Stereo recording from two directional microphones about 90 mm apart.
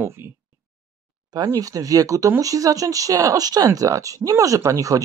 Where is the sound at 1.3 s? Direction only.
40° right (ahead or behind).